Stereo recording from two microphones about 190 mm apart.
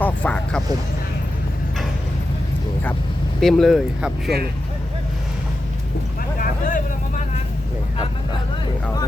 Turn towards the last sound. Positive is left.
turn(degrees=45)  # may be behind; listen again after turning